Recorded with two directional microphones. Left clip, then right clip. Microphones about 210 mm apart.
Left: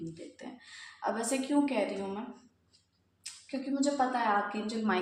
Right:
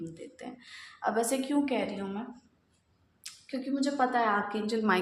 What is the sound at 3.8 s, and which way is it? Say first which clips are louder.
A woman's voice: right 2 dB; 40° right (ahead or behind).